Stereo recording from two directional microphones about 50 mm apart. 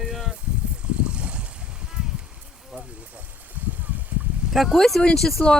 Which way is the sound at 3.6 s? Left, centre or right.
Right.